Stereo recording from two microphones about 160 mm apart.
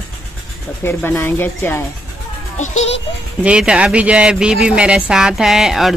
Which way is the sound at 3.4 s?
5° right (ahead or behind).